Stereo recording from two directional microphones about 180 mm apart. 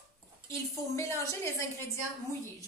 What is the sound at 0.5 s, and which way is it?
Speech, 15° left (ahead or behind).